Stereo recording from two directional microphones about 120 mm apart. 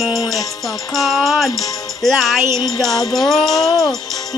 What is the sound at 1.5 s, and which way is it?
Speech, 30° left (ahead or behind).